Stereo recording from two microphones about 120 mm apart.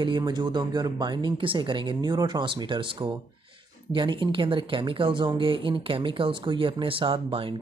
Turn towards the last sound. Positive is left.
turn(degrees=-45)  # may be behind; listen again after turning